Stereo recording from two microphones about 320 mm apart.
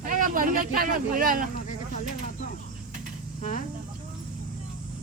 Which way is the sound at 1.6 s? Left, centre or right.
Left.